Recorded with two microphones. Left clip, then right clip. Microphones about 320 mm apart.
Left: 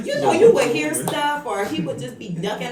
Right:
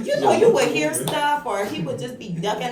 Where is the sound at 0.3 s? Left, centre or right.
Centre.